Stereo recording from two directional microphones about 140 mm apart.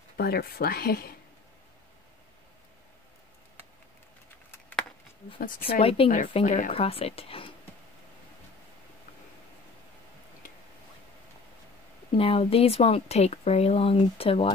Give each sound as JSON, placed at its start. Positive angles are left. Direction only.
{"t": 0.2, "sound": "speech", "side_deg": 90}
{"t": 4.5, "sound": "a sound", "side_deg": 15}
{"t": 5.7, "sound": "speech", "side_deg": 40}
{"t": 6.0, "sound": "speech", "side_deg": 90}
{"t": 6.4, "sound": "speech", "side_deg": 65}
{"t": 6.7, "sound": "speech", "side_deg": 45}
{"t": 12.1, "sound": "speech", "side_deg": 45}